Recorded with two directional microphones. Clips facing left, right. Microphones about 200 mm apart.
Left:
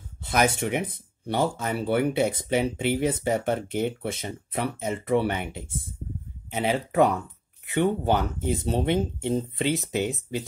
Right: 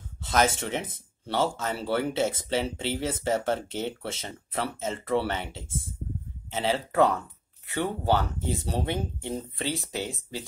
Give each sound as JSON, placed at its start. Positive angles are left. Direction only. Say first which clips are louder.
{"t": 0.2, "sound": "speech", "louder": "left 1 dB", "side_deg": 15}